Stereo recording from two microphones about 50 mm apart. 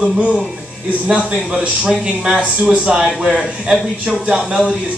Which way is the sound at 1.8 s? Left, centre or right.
Centre.